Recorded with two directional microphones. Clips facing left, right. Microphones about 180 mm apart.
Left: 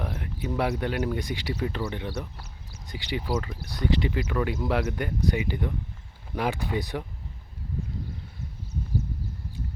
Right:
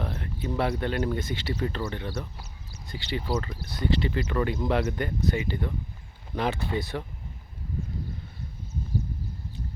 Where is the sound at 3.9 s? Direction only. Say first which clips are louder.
Even; 15° left (ahead or behind).